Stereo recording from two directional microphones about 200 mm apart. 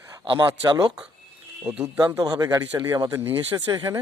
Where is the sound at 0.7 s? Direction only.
20° right (ahead or behind).